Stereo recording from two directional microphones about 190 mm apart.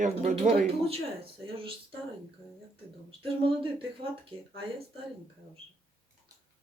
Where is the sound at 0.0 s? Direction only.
35° right (ahead or behind).